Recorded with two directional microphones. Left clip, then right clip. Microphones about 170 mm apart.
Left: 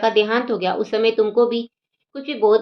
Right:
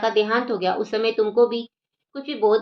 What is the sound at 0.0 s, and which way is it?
A woman's voice, 25° left (ahead or behind).